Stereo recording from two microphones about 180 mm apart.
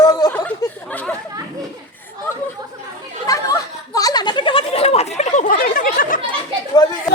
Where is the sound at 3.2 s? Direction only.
20° left (ahead or behind); by 5.5 s 40° left (ahead or behind).